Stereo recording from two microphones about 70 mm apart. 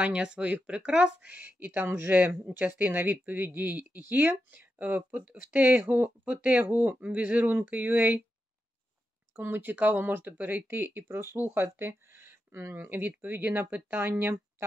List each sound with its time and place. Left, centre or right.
0.0 s speech: centre
1.3 s speech: right
9.3 s speech: right